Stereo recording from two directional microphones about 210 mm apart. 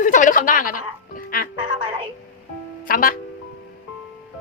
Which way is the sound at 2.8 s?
40° left (ahead or behind).